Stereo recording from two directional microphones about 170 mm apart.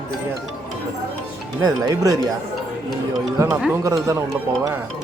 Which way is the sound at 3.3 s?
15° right (ahead or behind).